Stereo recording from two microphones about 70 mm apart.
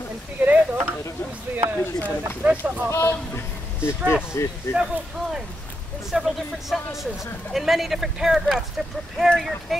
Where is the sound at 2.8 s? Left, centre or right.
Left.